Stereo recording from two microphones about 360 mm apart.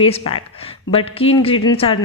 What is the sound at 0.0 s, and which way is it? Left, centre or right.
A woman's voice, centre.